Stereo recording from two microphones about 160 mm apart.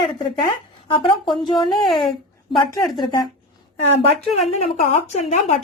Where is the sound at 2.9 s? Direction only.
25° left (ahead or behind).